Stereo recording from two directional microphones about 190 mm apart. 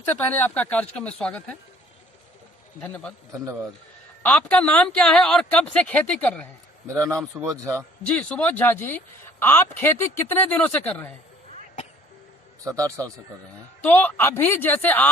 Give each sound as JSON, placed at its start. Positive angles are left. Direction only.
{"t": 0.0, "sound": "speech", "side_deg": 10}
{"t": 2.8, "sound": "a man's voice", "side_deg": 5}
{"t": 3.3, "sound": "a man's voice", "side_deg": -15}
{"t": 4.2, "sound": "speech", "side_deg": 5}
{"t": 6.8, "sound": "a man's voice", "side_deg": -15}
{"t": 8.0, "sound": "speech", "side_deg": 5}
{"t": 12.6, "sound": "a man's voice", "side_deg": -15}
{"t": 13.8, "sound": "speech", "side_deg": 10}